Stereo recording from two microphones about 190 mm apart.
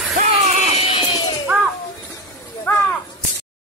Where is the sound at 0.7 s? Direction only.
35° left (ahead or behind).